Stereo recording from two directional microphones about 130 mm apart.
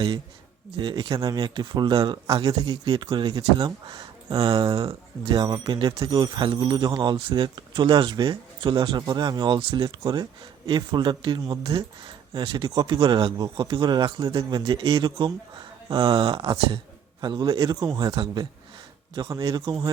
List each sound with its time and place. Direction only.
0.8 s speech: 35° right (ahead or behind)
10.0 s speech: 30° right (ahead or behind)